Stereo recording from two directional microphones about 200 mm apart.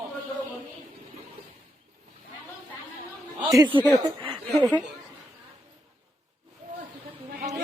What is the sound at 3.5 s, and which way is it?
Speech, 15° right (ahead or behind).